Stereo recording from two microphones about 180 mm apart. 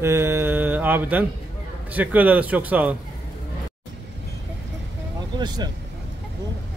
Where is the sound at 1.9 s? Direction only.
10° right (ahead or behind).